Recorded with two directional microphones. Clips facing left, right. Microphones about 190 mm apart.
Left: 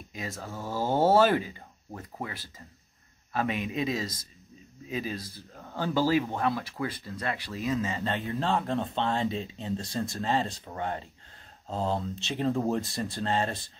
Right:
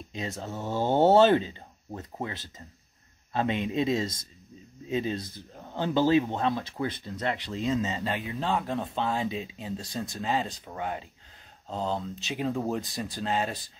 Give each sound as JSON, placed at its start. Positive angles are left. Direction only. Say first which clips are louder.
{"t": 0.1, "sound": "speech", "louder": "right 3 dB", "side_deg": -25}
{"t": 8.0, "sound": "speech", "louder": "left 1 dB", "side_deg": -5}